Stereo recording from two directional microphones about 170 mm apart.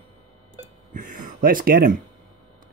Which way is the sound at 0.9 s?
50° right (ahead or behind).